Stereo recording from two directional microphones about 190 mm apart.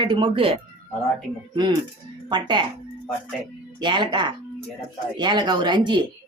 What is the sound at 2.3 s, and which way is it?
Speech, 25° right (ahead or behind).